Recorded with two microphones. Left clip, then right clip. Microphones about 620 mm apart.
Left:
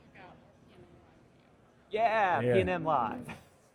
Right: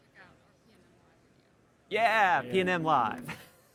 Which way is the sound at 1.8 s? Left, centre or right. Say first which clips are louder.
Right 3 dB; right.